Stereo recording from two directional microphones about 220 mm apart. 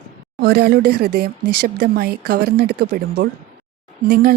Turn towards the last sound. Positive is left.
turn(degrees=-40)  # may be behind; listen again after turning